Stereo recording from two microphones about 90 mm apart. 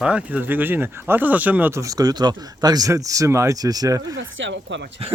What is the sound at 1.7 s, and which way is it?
Speech, 40° right (ahead or behind).